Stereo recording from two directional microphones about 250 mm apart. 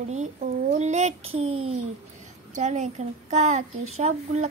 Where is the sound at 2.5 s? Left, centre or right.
Right.